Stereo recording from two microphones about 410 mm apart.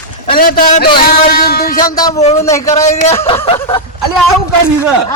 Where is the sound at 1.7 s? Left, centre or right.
Centre.